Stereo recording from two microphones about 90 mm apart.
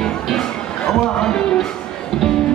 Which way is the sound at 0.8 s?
5° left (ahead or behind).